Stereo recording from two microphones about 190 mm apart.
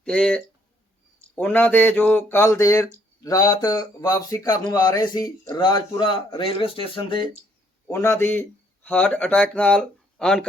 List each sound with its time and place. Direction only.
0.0 s speech: 5° left (ahead or behind); by 7.3 s 25° left (ahead or behind)
7.9 s speech: 15° left (ahead or behind)